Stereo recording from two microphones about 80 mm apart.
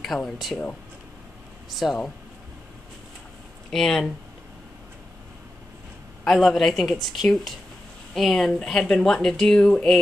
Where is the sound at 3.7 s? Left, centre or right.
Centre.